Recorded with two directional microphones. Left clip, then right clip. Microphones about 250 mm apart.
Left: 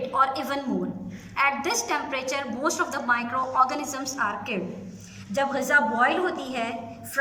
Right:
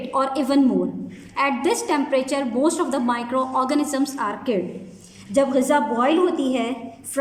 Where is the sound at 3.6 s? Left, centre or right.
Right.